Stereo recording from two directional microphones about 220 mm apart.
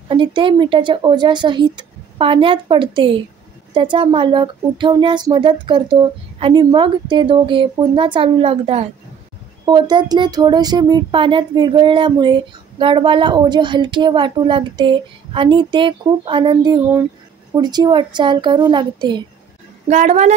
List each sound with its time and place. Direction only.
0.1 s speech: 20° right (ahead or behind)
19.9 s a woman's voice: 30° right (ahead or behind)